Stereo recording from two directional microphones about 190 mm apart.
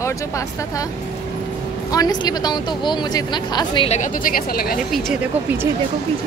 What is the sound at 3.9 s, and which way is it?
Speech, 45° left (ahead or behind).